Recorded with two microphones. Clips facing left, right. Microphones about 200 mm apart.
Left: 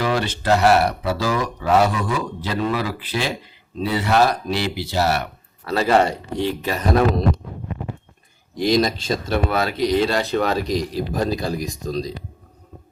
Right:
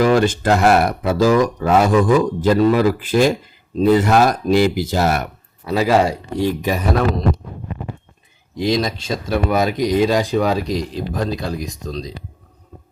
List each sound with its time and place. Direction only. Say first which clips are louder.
0.0 s speech: right 7 dB; 45° right (ahead or behind)
5.7 s speech: right 2 dB; 5° right (ahead or behind)
8.6 s speech: left 1 dB; centre (ahead or behind)
9.5 s speech: right 4 dB; 15° right (ahead or behind)
10.9 s speech: even; 5° left (ahead or behind)